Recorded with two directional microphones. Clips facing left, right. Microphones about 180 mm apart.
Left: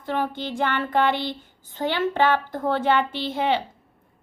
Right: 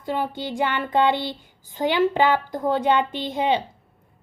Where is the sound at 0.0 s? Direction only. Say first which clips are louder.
Even; 15° right (ahead or behind).